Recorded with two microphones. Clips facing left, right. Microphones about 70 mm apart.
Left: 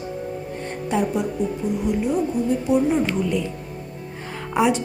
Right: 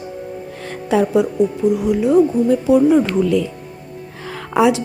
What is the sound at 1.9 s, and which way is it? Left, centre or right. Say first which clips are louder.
Speech: right 5 dB; right.